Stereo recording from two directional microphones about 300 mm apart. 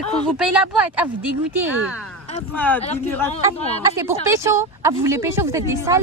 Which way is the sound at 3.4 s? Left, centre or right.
Centre.